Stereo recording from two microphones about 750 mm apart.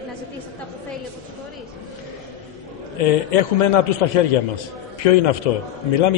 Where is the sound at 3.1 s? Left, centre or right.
Left.